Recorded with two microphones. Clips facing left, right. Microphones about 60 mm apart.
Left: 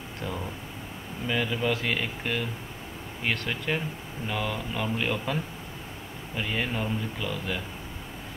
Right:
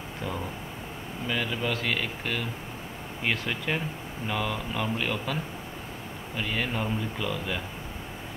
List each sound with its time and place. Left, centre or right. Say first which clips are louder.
1.2 s speech: left 2 dB; centre